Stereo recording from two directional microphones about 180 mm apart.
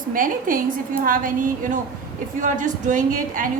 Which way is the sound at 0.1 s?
50° right (ahead or behind).